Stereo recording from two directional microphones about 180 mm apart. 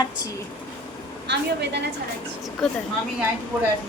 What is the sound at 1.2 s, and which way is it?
Speech, 70° right (ahead or behind).